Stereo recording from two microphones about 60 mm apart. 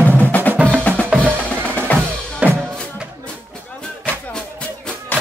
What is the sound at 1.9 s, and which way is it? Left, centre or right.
Drum, left.